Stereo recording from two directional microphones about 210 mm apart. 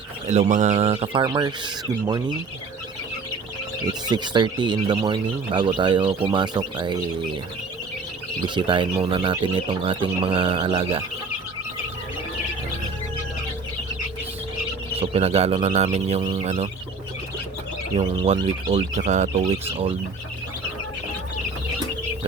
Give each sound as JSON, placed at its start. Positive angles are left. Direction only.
{"t": 0.3, "sound": "speech", "side_deg": -35}
{"t": 4.0, "sound": "speech", "side_deg": -20}
{"t": 8.5, "sound": "speech", "side_deg": -25}
{"t": 14.9, "sound": "speech", "side_deg": -25}
{"t": 17.9, "sound": "speech", "side_deg": -30}